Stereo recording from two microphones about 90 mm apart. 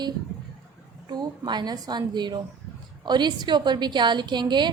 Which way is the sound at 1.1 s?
50° right (ahead or behind).